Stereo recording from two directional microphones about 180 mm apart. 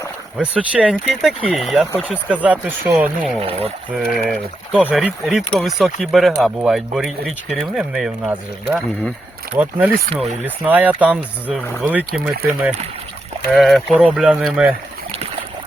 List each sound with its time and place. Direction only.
0.3 s speech: 5° right (ahead or behind)
3.4 s speech: 35° right (ahead or behind)
3.9 s speech: centre (ahead or behind)
15.1 s a sound: 35° right (ahead or behind)